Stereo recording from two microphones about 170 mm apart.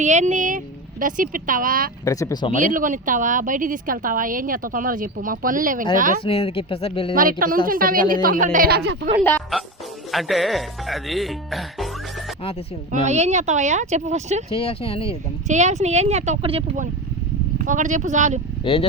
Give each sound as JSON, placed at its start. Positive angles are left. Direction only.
{"t": 0.0, "sound": "a woman's voice", "side_deg": -45}
{"t": 2.0, "sound": "speech", "side_deg": 20}
{"t": 2.6, "sound": "a woman's voice", "side_deg": -50}
{"t": 6.2, "sound": "speech", "side_deg": 35}
{"t": 7.2, "sound": "a woman's voice", "side_deg": -55}
{"t": 8.5, "sound": "speech", "side_deg": -65}
{"t": 10.1, "sound": "speech", "side_deg": 0}
{"t": 12.9, "sound": "speech", "side_deg": -40}
{"t": 14.5, "sound": "speech", "side_deg": 35}
{"t": 15.4, "sound": "speech", "side_deg": -40}
{"t": 17.6, "sound": "a woman's voice", "side_deg": -50}
{"t": 18.6, "sound": "speech", "side_deg": 30}